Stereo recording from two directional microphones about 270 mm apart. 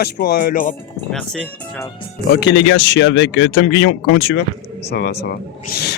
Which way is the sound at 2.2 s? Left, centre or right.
Left.